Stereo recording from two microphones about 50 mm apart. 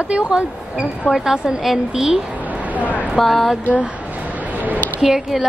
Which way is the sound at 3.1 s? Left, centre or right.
Centre.